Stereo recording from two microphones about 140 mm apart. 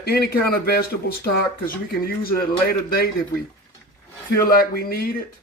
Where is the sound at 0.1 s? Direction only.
90° left.